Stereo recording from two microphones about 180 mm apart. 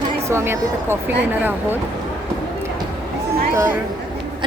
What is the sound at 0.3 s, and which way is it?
Speech, 15° right (ahead or behind).